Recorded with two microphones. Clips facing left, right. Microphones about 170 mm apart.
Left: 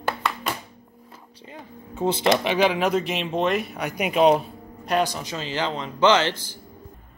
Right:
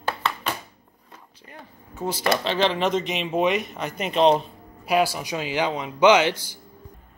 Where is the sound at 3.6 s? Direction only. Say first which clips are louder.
Left 2 dB; 10° left (ahead or behind).